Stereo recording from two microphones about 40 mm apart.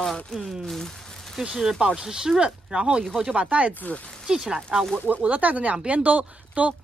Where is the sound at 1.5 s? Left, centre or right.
Centre.